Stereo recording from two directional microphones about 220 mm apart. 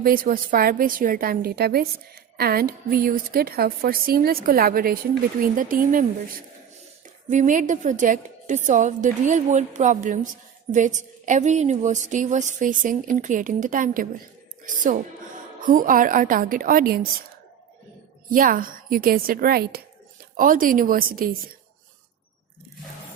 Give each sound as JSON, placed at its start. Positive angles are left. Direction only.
{"t": 0.0, "sound": "a woman's voice", "side_deg": -40}
{"t": 7.3, "sound": "a woman's voice", "side_deg": -35}
{"t": 18.3, "sound": "a woman's voice", "side_deg": -40}